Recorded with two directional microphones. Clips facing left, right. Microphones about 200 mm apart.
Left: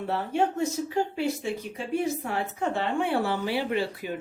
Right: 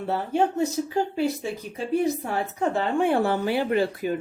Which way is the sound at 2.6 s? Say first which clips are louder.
Right 5 dB; 45° right (ahead or behind).